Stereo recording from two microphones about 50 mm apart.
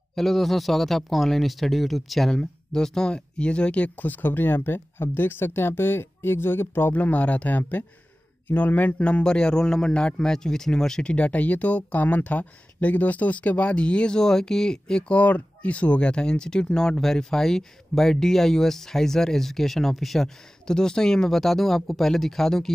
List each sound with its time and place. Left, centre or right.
0.1 s a man's voice: centre; by 6.9 s left
6.9 s speech: left
9.2 s a man's voice: centre
15.1 s speech: left; by 22.7 s centre